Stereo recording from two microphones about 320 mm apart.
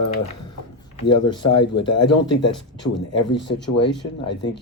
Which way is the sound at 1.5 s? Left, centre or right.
Left.